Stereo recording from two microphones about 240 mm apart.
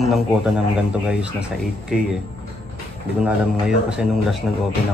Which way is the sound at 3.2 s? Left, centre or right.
Centre.